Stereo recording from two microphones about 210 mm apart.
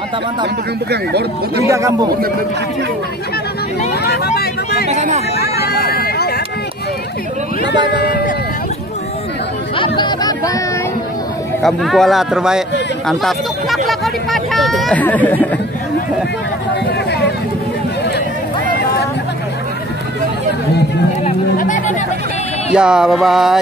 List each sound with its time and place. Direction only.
1.7 s a man's voice: 15° right (ahead or behind)
4.0 s speech: 50° left (ahead or behind)
4.8 s speech: 30° right (ahead or behind)
5.4 s speech: 50° left (ahead or behind)
7.9 s speech: 50° left (ahead or behind)
9.8 s music: 20° left (ahead or behind)
11.6 s speech: centre (ahead or behind)
21.2 s a sound: 35° left (ahead or behind)
22.7 s music: 5° right (ahead or behind)